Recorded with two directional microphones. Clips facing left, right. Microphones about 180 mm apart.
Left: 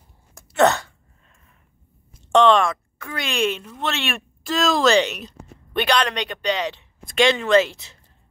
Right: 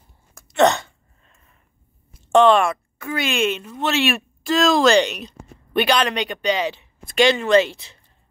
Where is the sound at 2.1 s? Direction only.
5° right (ahead or behind).